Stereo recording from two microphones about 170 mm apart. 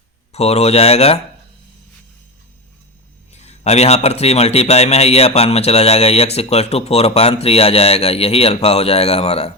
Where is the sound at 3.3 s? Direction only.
40° left (ahead or behind).